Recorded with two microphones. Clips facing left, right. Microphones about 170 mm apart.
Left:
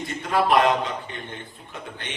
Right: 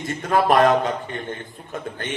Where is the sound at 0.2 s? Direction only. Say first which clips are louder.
Right 3 dB; 45° right (ahead or behind).